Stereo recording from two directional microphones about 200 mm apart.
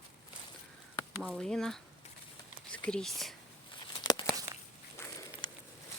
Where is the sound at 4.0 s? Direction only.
20° left (ahead or behind).